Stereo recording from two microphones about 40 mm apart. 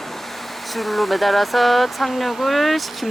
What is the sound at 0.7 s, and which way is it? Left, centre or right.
Speech, centre.